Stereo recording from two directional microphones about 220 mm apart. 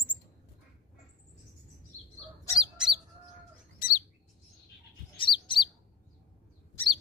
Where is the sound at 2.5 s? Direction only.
Centre (ahead or behind).